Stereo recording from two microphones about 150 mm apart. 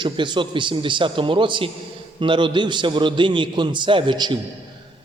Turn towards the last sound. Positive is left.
turn(degrees=-30)  # may be behind; listen again after turning